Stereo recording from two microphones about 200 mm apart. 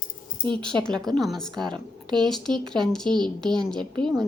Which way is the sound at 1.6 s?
25° right (ahead or behind).